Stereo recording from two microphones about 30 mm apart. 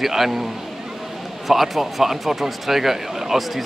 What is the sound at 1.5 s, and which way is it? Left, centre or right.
Speech, centre.